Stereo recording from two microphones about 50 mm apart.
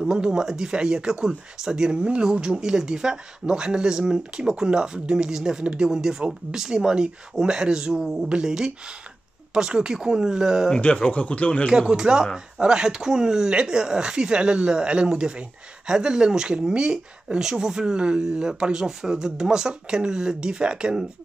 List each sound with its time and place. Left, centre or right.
0.0 s speech: centre
10.8 s speech: left
11.9 s speech: centre